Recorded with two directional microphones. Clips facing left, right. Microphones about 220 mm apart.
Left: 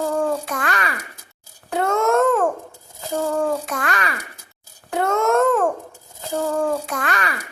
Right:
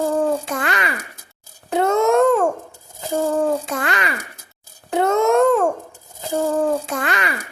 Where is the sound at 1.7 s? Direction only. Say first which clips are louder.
Right 3 dB; 20° right (ahead or behind).